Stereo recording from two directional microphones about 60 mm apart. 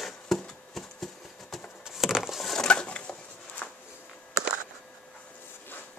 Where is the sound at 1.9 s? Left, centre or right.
Centre.